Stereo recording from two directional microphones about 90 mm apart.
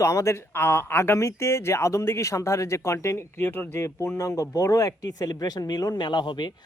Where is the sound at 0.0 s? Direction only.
35° left (ahead or behind).